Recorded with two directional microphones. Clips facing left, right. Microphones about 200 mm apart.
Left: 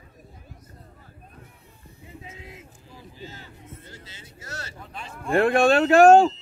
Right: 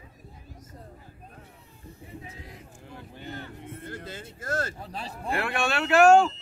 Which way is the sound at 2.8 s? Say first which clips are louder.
Right 2 dB; 60° right (ahead or behind).